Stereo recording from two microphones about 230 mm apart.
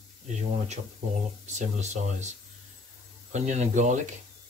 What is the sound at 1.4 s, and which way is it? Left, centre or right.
Speech, right.